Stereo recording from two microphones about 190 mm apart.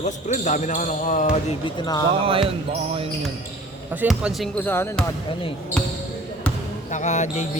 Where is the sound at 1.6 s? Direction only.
20° left (ahead or behind).